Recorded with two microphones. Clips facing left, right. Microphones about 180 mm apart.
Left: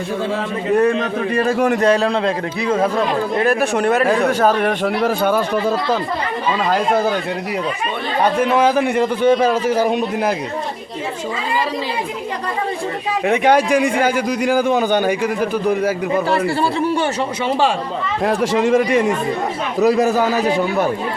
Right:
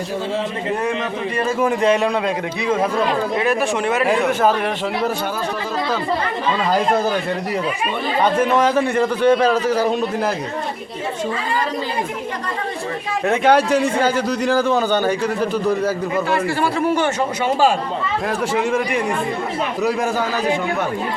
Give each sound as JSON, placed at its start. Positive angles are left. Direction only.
{"t": 1.5, "sound": "a man's voice", "side_deg": 70}
{"t": 1.8, "sound": "a man's voice", "side_deg": 35}
{"t": 3.3, "sound": "a man's voice", "side_deg": 45}
{"t": 5.0, "sound": "a man's voice", "side_deg": 70}
{"t": 8.2, "sound": "a man's voice", "side_deg": 10}
{"t": 13.2, "sound": "a man's voice", "side_deg": 15}
{"t": 16.6, "sound": "a man's voice", "side_deg": 30}
{"t": 18.3, "sound": "a man's voice", "side_deg": 35}